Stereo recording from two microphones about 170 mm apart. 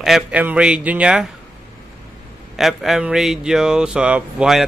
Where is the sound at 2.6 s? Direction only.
Centre (ahead or behind).